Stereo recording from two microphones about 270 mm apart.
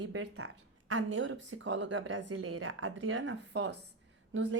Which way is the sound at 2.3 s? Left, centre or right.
Right.